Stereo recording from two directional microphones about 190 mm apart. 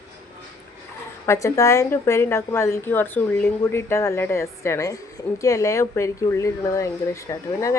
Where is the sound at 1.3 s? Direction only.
15° left (ahead or behind).